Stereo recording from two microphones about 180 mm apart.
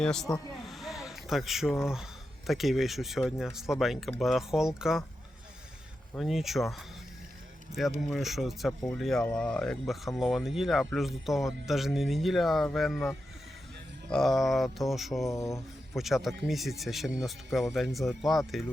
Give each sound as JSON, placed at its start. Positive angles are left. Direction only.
{"t": 0.0, "sound": "speech", "side_deg": 5}
{"t": 0.6, "sound": "a sound", "side_deg": 0}
{"t": 2.5, "sound": "speech", "side_deg": 0}
{"t": 6.1, "sound": "speech", "side_deg": 0}
{"t": 15.3, "sound": "a sound", "side_deg": 15}
{"t": 16.0, "sound": "speech", "side_deg": 0}